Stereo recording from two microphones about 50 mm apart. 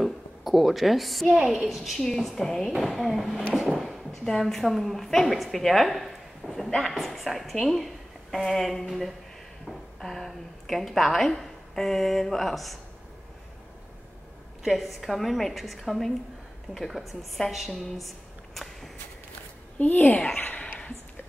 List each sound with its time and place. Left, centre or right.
0.0 s a woman's voice: centre
2.0 s a woman's voice: centre
3.5 s a sound: centre
4.3 s a woman's voice: centre
14.6 s a woman's voice: centre
19.8 s a child's voice: left